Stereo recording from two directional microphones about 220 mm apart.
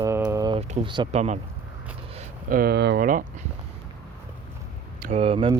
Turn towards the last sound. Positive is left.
turn(degrees=-25)  # may be behind; listen again after turning